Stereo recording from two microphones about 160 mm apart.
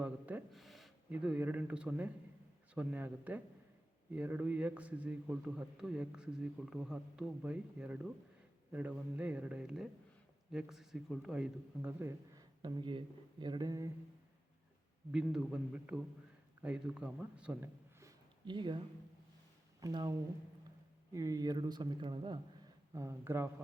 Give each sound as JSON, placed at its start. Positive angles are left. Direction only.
{"t": 0.0, "sound": "gasp", "side_deg": -10}
{"t": 1.1, "sound": "a man's voice", "side_deg": -10}
{"t": 15.1, "sound": "a man's voice", "side_deg": -5}
{"t": 18.4, "sound": "speech", "side_deg": -30}
{"t": 19.8, "sound": "speech", "side_deg": -25}
{"t": 22.9, "sound": "a man's voice", "side_deg": -20}